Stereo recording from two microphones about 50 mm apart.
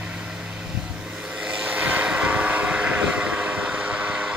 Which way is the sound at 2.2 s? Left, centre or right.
Right.